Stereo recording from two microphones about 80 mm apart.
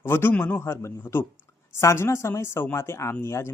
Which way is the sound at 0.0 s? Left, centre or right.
Left.